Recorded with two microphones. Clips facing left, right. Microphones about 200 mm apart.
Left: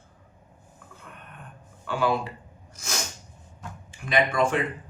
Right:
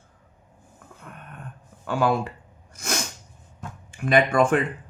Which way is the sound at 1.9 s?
45° right (ahead or behind).